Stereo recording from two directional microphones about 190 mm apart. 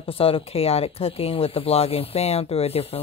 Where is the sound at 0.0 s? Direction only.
30° left (ahead or behind).